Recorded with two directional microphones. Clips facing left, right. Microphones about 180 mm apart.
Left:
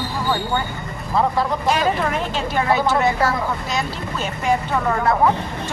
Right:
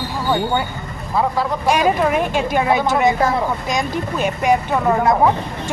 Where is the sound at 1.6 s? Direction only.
15° right (ahead or behind).